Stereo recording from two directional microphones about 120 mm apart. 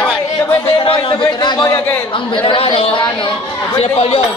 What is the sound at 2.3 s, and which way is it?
Speech, 45° left (ahead or behind).